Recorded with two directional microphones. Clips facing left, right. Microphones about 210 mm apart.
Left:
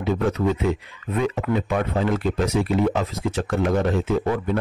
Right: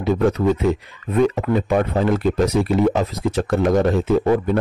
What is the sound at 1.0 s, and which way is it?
Speech, 40° right (ahead or behind).